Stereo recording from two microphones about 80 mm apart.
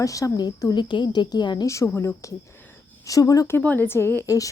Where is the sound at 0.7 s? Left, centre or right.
Left.